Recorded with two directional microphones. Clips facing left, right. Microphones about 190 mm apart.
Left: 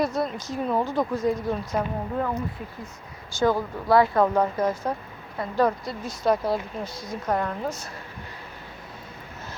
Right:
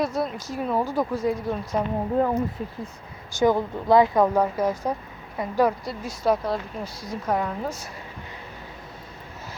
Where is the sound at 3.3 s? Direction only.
20° right (ahead or behind).